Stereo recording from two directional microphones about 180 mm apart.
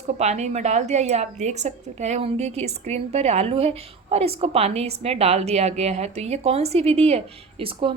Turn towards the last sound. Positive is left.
turn(degrees=-30)  # may be behind; listen again after turning